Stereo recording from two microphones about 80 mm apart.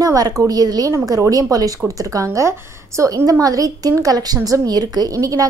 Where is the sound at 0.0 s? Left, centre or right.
Right.